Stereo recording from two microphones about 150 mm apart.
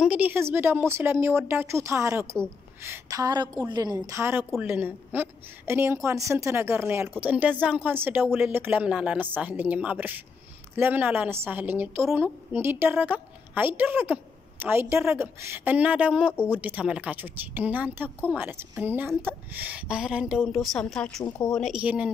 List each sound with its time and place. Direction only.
0.0 s a woman's voice: 10° right (ahead or behind)